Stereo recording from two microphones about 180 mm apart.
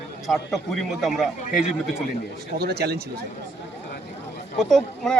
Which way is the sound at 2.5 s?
60° right (ahead or behind).